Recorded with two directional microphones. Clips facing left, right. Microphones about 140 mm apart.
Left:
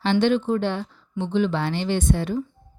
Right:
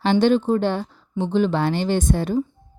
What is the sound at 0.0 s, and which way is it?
A woman's voice, 40° right (ahead or behind).